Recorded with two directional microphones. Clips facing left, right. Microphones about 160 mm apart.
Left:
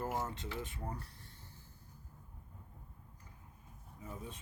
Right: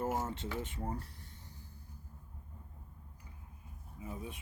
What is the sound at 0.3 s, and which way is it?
Speech, 25° right (ahead or behind).